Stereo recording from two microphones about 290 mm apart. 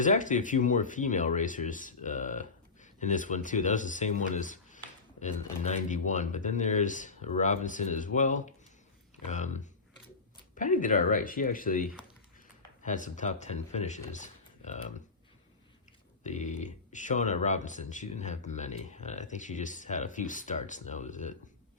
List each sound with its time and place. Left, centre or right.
0.0 s speech: left
14.1 s a sound: left
16.2 s speech: left